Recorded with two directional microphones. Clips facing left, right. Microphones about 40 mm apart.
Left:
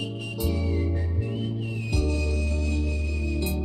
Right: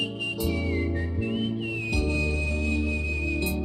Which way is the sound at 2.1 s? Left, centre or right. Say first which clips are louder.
Right 2 dB; right.